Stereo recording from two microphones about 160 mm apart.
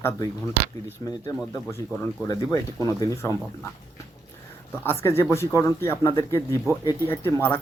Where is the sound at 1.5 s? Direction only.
15° left (ahead or behind).